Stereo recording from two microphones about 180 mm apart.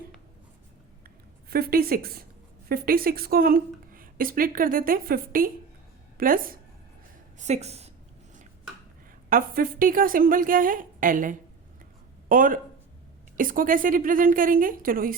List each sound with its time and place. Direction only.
1.5 s a woman's voice: 60° right (ahead or behind)
7.3 s speech: 40° right (ahead or behind)
9.3 s a woman's voice: 50° right (ahead or behind)